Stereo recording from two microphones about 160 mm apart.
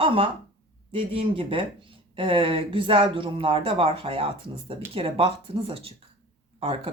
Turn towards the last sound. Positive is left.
turn(degrees=-40)  # may be behind; listen again after turning